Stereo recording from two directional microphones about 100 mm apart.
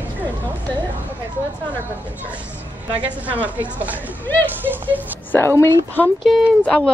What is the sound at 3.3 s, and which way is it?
Speech, 15° right (ahead or behind).